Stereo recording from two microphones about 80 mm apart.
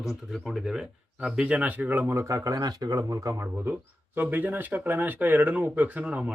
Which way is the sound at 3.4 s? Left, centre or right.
Right.